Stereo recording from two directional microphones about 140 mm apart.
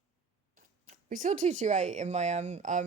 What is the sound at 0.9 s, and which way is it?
Speech, 70° right (ahead or behind).